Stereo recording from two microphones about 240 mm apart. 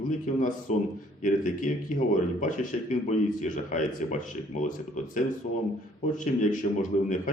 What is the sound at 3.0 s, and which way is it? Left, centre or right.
Speech, left.